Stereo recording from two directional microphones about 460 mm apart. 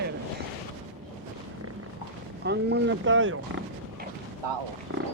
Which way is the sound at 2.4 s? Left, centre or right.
Right.